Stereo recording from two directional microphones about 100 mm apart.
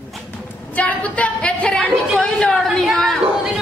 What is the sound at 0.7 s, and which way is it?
A woman's voice, 15° left (ahead or behind).